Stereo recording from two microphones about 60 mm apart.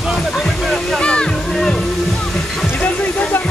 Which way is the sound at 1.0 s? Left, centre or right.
Centre.